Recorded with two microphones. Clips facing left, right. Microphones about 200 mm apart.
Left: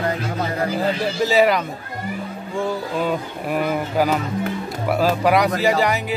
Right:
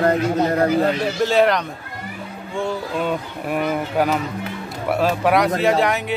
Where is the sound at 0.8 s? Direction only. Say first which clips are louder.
Right 2 dB; centre (ahead or behind).